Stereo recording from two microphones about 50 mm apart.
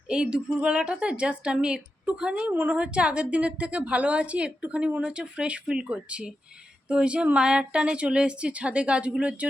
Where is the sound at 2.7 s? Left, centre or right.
Right.